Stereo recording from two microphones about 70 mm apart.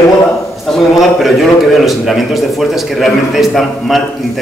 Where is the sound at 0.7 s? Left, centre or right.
Centre.